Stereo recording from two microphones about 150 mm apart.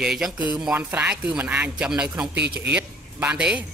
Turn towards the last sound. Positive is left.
turn(degrees=-10)  # may be behind; listen again after turning